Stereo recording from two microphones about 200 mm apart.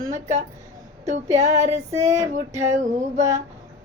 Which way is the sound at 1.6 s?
35° right (ahead or behind).